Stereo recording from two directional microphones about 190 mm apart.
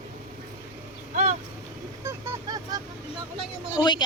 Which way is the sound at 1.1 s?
40° right (ahead or behind).